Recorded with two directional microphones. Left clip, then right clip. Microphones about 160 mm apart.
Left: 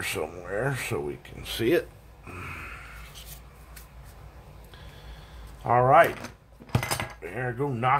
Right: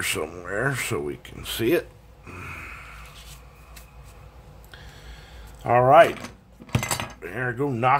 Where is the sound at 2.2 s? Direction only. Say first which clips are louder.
Right 1 dB; 10° right (ahead or behind).